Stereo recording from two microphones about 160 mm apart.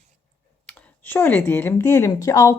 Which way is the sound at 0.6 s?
10° left (ahead or behind).